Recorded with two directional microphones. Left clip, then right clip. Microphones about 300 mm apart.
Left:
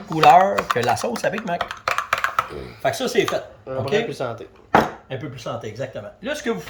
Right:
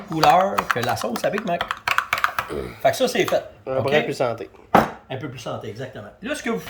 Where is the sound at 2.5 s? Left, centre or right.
Centre.